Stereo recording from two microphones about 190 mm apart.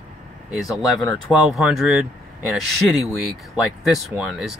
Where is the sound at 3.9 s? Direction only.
Centre (ahead or behind).